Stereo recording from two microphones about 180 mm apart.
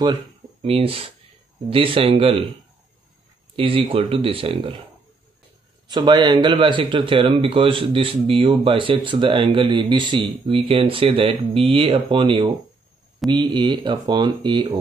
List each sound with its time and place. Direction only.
0.6 s speech: 35° right (ahead or behind)
3.5 s speech: 30° right (ahead or behind)
5.9 s speech: 25° right (ahead or behind)